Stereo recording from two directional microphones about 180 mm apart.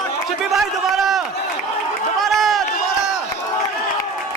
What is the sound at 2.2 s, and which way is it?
Run, centre (ahead or behind).